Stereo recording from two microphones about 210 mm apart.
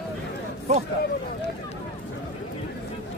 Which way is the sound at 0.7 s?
35° right (ahead or behind).